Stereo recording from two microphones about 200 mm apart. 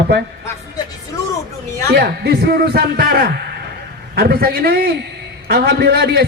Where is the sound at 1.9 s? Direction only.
55° right (ahead or behind).